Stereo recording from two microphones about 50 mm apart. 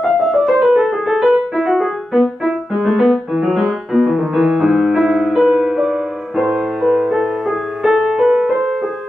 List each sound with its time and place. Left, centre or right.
0.0 s music: centre
8.2 s music: centre